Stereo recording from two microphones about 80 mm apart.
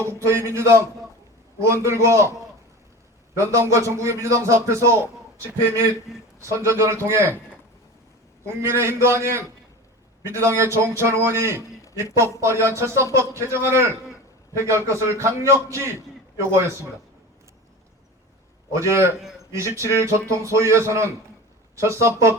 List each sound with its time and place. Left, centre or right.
0.0 s speech: right
3.3 s speech: right
8.6 s speech: right
18.7 s speech: right